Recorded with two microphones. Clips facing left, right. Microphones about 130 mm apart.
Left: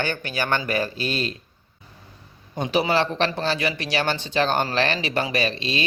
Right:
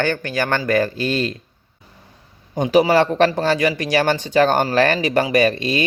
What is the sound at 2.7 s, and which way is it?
Speech, 45° right (ahead or behind).